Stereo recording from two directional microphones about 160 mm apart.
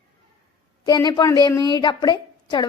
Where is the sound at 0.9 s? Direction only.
25° left (ahead or behind).